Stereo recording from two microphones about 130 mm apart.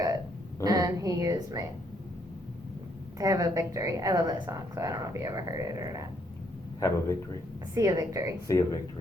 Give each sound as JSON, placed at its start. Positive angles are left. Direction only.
{"t": 0.6, "sound": "a woman's voice", "side_deg": -30}
{"t": 3.2, "sound": "a woman's voice", "side_deg": -25}
{"t": 6.7, "sound": "a man's voice", "side_deg": 25}
{"t": 7.7, "sound": "a woman's voice", "side_deg": -25}
{"t": 8.4, "sound": "speech", "side_deg": 25}